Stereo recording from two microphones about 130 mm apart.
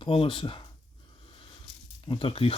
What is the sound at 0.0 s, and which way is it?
Speech, 40° left (ahead or behind).